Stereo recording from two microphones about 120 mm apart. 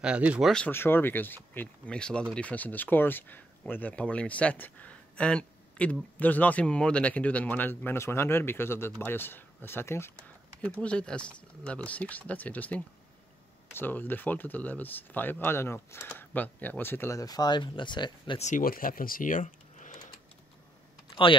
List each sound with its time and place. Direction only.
0.0 s speech: 10° right (ahead or behind)
0.7 s speech: 15° left (ahead or behind)
10.6 s speech: 10° left (ahead or behind); by 18.4 s 40° left (ahead or behind)
19.2 s a sound: 90° left
21.1 s typing: 45° left (ahead or behind)